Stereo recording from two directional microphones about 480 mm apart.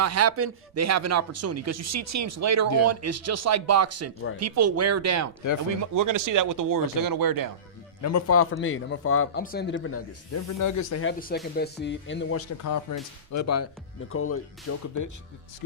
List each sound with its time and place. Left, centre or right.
0.0 s speech: right
8.0 s a man's voice: left
11.0 s a man's voice: centre